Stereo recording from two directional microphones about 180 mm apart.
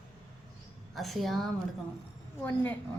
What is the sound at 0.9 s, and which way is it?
Speech, centre (ahead or behind).